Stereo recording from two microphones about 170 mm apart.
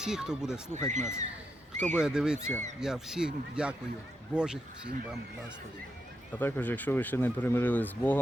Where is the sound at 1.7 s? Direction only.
45° right (ahead or behind).